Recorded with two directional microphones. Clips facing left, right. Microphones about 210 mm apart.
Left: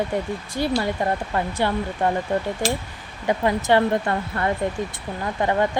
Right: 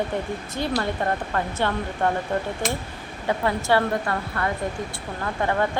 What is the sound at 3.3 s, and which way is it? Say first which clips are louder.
Speech: left 3 dB; 20° left (ahead or behind).